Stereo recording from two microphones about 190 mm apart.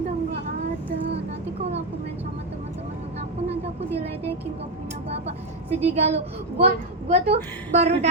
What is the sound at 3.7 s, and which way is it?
Speech, 35° right (ahead or behind).